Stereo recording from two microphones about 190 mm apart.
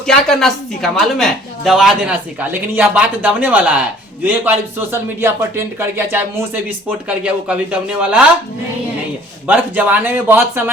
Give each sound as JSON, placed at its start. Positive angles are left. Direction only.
{"t": 0.1, "sound": "a man's voice", "side_deg": 0}
{"t": 9.5, "sound": "a man's voice", "side_deg": -10}